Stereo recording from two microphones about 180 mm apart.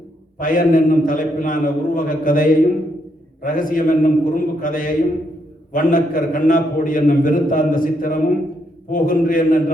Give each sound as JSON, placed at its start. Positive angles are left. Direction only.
{"t": 0.3, "sound": "a man's voice", "side_deg": 50}